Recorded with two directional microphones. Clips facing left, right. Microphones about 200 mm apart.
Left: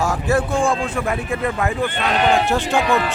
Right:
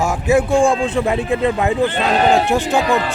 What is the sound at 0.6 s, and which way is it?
A man's voice, 25° right (ahead or behind).